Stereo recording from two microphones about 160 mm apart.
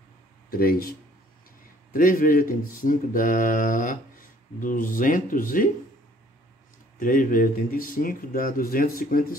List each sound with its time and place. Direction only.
0.5 s speech: 65° left (ahead or behind)
7.0 s speech: 55° left (ahead or behind)